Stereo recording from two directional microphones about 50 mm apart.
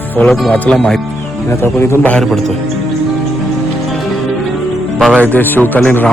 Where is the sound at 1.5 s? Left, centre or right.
Left.